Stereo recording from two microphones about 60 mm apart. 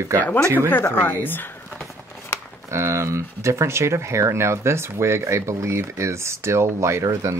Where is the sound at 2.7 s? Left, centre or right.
Right.